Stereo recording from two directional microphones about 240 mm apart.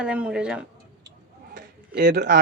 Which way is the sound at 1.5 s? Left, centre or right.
Right.